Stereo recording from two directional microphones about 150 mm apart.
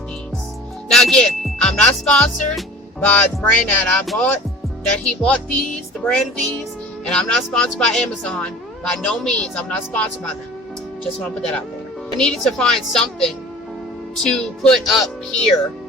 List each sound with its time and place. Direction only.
0.9 s speech: centre (ahead or behind)
3.1 s music: 10° left (ahead or behind)
6.1 s speech: 5° left (ahead or behind)
11.3 s speech: 5° left (ahead or behind)